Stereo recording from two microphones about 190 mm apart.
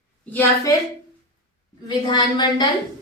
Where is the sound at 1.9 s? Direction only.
20° left (ahead or behind).